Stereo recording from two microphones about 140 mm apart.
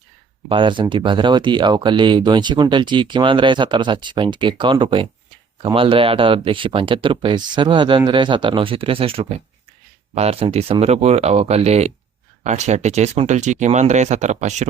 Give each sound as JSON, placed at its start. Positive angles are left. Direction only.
{"t": 0.4, "sound": "speech", "side_deg": -35}